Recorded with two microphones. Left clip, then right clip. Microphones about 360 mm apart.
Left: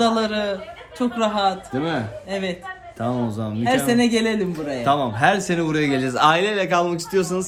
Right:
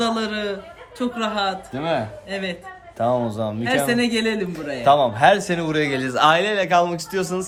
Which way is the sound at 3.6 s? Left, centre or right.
Centre.